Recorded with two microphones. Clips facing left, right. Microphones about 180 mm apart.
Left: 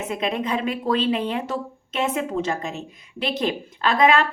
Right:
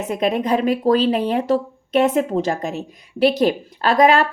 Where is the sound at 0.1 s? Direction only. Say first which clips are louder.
Right 6 dB; 40° right (ahead or behind).